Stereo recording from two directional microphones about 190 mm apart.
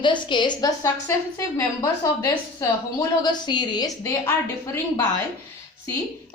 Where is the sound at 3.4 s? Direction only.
20° left (ahead or behind).